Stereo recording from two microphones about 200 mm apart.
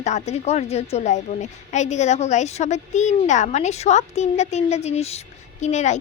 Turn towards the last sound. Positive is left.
turn(degrees=35)  # may be behind; listen again after turning